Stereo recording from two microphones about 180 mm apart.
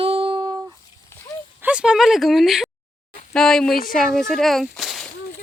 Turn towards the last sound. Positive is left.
turn(degrees=0)  # may be behind; listen again after turning